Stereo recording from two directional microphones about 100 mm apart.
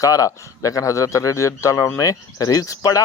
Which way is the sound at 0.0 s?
35° left (ahead or behind).